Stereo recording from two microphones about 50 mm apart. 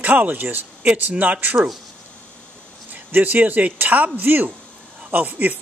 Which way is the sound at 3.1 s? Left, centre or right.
Right.